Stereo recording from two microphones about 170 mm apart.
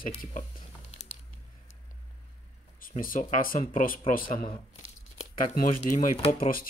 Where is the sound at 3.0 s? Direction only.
55° left (ahead or behind).